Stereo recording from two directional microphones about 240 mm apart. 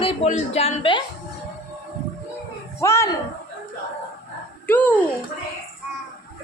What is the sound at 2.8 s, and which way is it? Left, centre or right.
Speech, centre.